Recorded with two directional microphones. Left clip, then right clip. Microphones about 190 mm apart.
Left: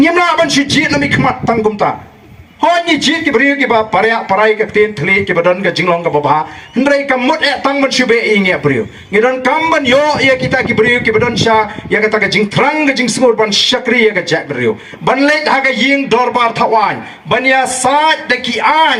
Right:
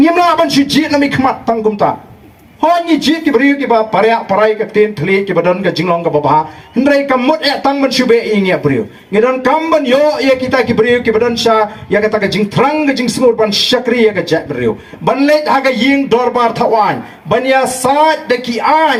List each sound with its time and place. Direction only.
0.0 s a man's voice: 15° left (ahead or behind)
2.6 s a man's voice: 15° left (ahead or behind)
6.7 s a man's voice: 15° left (ahead or behind)